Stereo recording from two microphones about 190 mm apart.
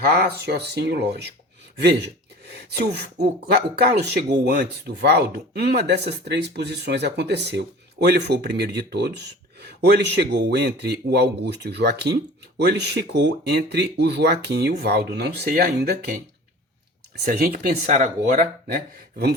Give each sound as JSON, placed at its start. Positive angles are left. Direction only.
{"t": 0.0, "sound": "speech", "side_deg": -55}
{"t": 17.2, "sound": "speech", "side_deg": -50}